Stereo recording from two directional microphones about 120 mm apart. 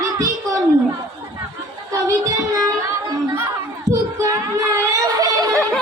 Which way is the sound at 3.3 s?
25° right (ahead or behind).